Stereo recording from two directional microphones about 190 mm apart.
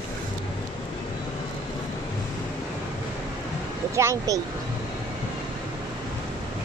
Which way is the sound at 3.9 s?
15° right (ahead or behind).